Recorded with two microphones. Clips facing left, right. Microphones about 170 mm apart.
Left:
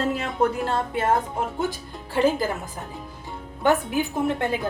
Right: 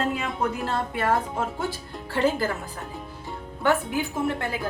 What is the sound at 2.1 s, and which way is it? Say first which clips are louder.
Speech: left 2 dB; 15° left (ahead or behind).